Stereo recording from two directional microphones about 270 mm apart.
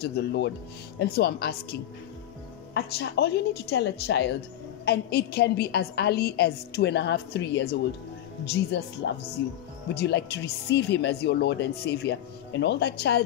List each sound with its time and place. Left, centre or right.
0.0 s speech: left
8.8 s speech: left
9.9 s speech: left